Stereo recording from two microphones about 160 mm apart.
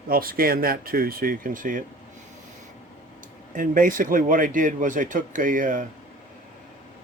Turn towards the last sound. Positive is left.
turn(degrees=-55)  # may be behind; listen again after turning